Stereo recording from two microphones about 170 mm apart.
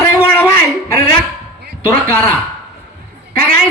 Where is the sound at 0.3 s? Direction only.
15° left (ahead or behind).